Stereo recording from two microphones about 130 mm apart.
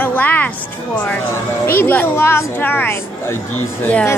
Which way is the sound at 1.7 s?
15° left (ahead or behind).